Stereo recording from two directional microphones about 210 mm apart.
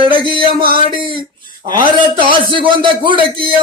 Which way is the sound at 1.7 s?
20° right (ahead or behind).